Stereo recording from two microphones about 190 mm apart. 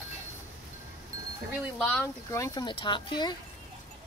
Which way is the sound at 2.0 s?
15° left (ahead or behind).